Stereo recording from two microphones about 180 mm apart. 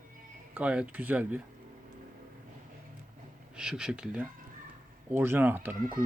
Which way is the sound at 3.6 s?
5° right (ahead or behind).